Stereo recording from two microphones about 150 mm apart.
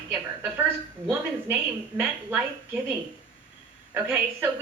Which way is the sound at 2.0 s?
10° right (ahead or behind).